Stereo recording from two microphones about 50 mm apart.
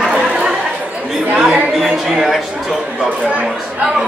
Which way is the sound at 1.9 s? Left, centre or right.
Centre.